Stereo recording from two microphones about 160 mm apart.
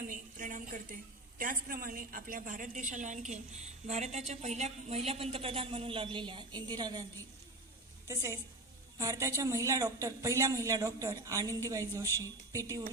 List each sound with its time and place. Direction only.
0.0 s a sound: 55° right (ahead or behind)
1.4 s a woman's voice: 60° right (ahead or behind); by 7.0 s 25° right (ahead or behind)
8.0 s a woman's voice: 20° right (ahead or behind)
12.0 s a woman's voice: 15° left (ahead or behind)